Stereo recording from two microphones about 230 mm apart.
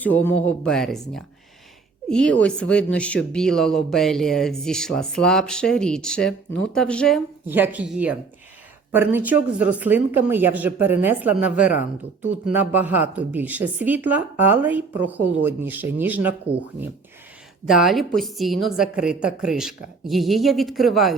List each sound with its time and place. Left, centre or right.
0.0 s speech: centre
7.4 s speech: centre
17.7 s speech: centre